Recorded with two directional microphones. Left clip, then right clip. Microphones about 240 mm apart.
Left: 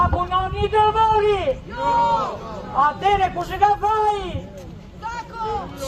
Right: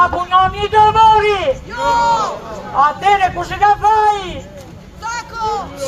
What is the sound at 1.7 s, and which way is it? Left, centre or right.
Speech, right.